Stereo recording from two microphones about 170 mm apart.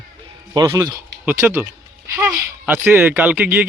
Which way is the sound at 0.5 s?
20° right (ahead or behind).